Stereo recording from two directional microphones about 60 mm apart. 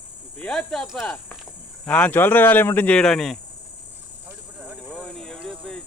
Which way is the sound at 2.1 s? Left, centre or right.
Left.